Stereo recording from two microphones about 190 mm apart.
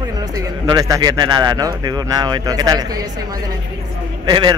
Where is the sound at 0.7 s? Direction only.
20° right (ahead or behind).